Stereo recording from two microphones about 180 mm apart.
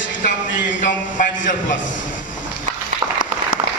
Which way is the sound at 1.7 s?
90° left.